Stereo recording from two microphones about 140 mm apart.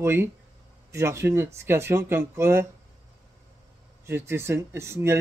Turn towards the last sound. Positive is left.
turn(degrees=-20)  # may be behind; listen again after turning